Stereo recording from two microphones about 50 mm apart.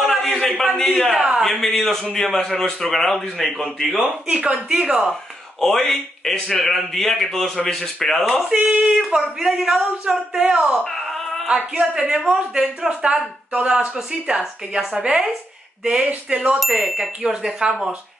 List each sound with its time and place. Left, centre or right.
0.1 s a man's voice: centre
0.7 s speech: centre
1.1 s speech: centre
1.4 s a man's voice: centre
4.0 s speech: centre
5.6 s speech: centre
8.6 s speech: centre
10.4 s speech: right
10.8 s a sound: centre
11.4 s speech: right
16.5 s speech: centre